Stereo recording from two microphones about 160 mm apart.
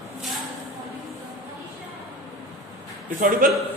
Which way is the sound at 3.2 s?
60° right (ahead or behind).